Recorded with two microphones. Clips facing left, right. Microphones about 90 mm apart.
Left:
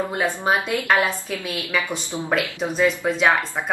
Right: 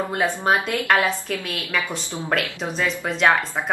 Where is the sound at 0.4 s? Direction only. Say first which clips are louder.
Even; 15° left (ahead or behind).